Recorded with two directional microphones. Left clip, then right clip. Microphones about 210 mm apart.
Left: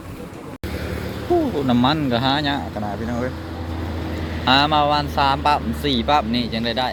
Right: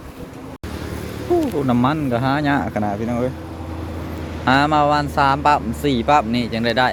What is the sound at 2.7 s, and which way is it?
Speech, 40° right (ahead or behind).